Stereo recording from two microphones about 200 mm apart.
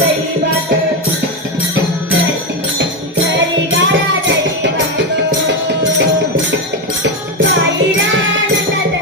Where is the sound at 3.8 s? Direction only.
65° right (ahead or behind).